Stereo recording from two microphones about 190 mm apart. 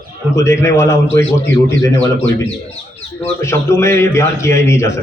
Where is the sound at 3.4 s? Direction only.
15° left (ahead or behind).